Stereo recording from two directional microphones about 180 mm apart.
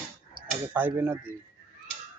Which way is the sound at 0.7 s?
10° right (ahead or behind).